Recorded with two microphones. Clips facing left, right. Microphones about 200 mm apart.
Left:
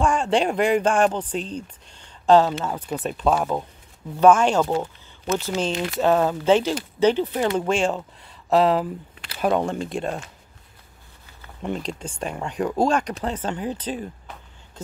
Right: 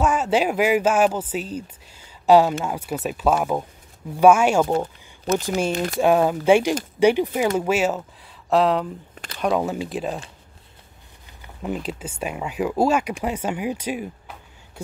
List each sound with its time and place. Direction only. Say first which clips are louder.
0.0 s speech: even; 5° right (ahead or behind)
5.3 s speech: right 2 dB; 40° right (ahead or behind)
5.9 s speech: right 2 dB; 10° right (ahead or behind)
11.6 s speech: right 1 dB; 5° right (ahead or behind)